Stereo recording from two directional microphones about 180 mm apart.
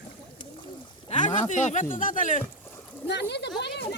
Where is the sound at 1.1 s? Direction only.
40° left (ahead or behind).